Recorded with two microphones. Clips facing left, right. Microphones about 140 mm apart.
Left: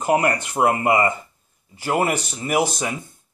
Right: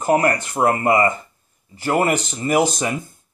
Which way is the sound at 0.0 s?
15° left (ahead or behind).